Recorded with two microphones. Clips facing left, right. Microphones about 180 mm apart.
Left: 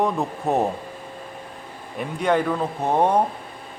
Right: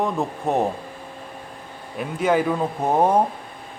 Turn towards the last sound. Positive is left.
turn(degrees=-10)  # may be behind; listen again after turning